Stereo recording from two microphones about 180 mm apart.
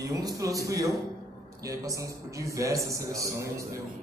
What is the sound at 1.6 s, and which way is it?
A man's voice, 20° right (ahead or behind).